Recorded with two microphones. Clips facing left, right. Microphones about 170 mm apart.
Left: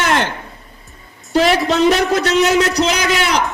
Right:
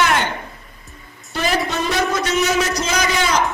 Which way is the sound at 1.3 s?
75° left (ahead or behind).